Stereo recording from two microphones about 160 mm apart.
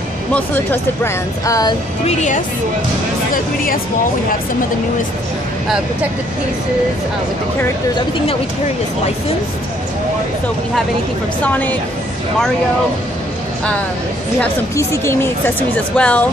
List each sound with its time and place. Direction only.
0.3 s speech: 15° left (ahead or behind)
2.0 s speech: 50° left (ahead or behind)
11.4 s speech: 10° left (ahead or behind)
14.4 s speech: 15° left (ahead or behind)